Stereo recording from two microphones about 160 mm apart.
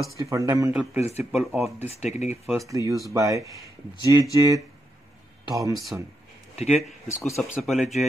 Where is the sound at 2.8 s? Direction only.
25° left (ahead or behind).